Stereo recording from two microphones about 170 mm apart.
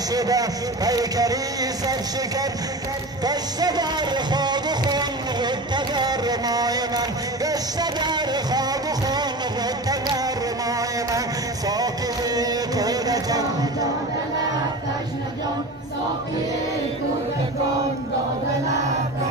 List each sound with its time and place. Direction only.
0.1 s speech: 20° right (ahead or behind)
3.3 s music: 25° right (ahead or behind)